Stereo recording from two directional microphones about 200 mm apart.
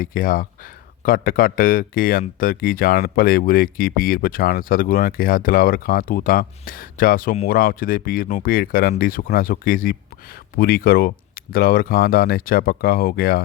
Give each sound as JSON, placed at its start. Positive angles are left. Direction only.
{"t": 0.0, "sound": "speech", "side_deg": 45}